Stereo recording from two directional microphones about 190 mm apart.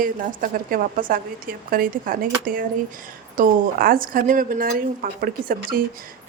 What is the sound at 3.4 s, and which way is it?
Speech, 50° right (ahead or behind).